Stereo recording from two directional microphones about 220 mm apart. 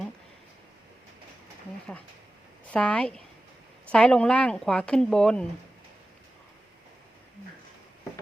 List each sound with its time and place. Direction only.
2.7 s speech: 5° left (ahead or behind)